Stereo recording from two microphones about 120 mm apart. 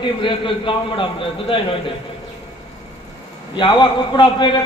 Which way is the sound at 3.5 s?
40° left (ahead or behind).